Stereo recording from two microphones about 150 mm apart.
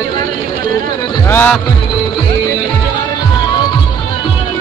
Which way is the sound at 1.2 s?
15° left (ahead or behind).